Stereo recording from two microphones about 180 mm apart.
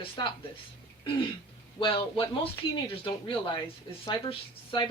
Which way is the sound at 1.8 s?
30° left (ahead or behind).